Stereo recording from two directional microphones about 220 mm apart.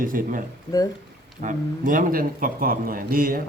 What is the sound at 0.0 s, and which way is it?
Speech, 40° right (ahead or behind).